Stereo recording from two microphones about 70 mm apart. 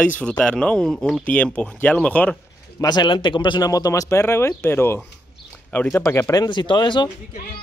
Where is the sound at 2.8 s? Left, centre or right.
Left.